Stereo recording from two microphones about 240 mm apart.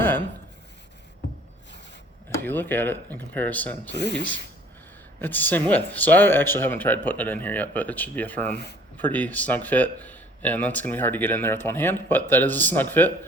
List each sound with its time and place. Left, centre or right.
2.4 s speech: centre
3.9 s speech: left
5.2 s speech: centre